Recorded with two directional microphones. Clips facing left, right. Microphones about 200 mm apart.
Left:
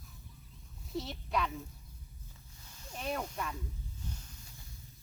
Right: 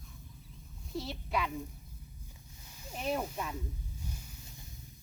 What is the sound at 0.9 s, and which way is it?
Speech, centre (ahead or behind).